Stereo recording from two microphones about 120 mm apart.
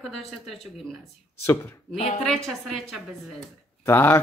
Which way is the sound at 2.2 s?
5° left (ahead or behind).